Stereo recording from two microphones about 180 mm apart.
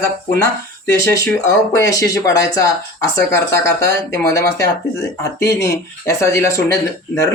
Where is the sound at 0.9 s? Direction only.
15° left (ahead or behind).